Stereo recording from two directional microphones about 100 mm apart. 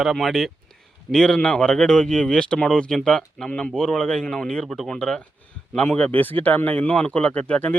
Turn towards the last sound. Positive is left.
turn(degrees=15)  # may be behind; listen again after turning